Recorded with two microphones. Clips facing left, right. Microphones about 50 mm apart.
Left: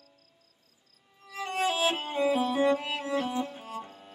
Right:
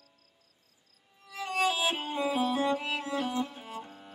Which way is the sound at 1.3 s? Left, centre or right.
Left.